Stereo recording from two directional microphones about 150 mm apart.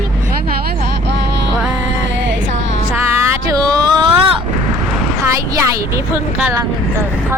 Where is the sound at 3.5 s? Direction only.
25° right (ahead or behind).